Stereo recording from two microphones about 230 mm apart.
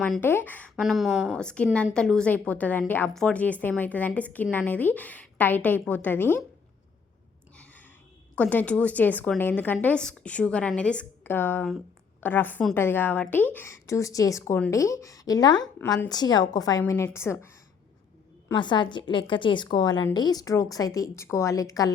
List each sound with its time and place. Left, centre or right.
0.0 s a woman's voice: centre
7.5 s sigh: centre
8.4 s a woman's voice: centre